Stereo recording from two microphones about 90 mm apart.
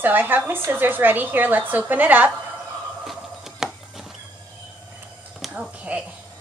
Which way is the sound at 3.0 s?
5° right (ahead or behind).